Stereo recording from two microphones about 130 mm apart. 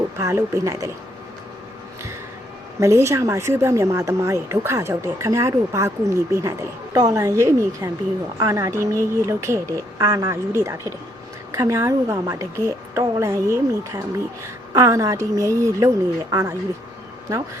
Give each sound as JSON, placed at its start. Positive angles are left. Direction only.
{"t": 0.2, "sound": "speech", "side_deg": -20}
{"t": 2.8, "sound": "speech", "side_deg": -20}